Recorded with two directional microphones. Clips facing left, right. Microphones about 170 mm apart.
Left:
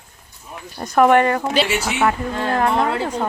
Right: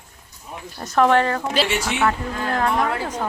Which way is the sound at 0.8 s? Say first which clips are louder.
Left 3 dB; 15° left (ahead or behind).